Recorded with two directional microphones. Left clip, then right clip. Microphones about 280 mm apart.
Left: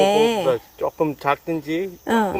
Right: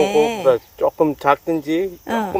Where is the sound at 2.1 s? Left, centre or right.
Centre.